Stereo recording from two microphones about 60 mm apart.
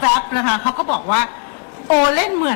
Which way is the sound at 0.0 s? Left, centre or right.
Left.